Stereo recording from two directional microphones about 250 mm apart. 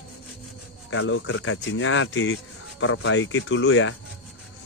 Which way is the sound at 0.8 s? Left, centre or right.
Left.